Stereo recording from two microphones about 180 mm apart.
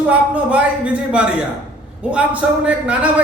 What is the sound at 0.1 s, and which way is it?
A man's voice, 5° right (ahead or behind).